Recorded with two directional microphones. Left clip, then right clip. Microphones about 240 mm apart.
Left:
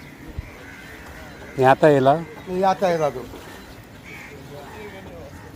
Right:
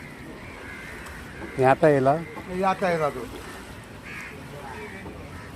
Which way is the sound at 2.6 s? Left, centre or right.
Left.